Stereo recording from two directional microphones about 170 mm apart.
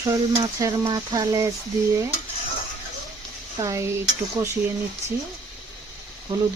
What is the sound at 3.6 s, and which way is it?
Stir, 15° right (ahead or behind).